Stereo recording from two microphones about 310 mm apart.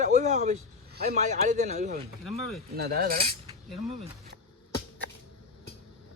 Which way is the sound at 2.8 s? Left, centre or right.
Right.